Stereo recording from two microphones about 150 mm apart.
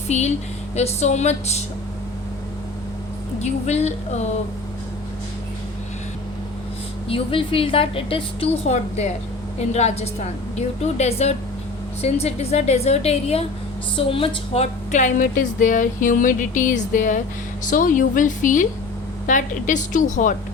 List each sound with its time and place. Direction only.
0.1 s a woman's voice: 50° left (ahead or behind)
3.4 s a woman's voice: 45° left (ahead or behind)
7.1 s a woman's voice: 35° left (ahead or behind); by 20.3 s 55° left (ahead or behind)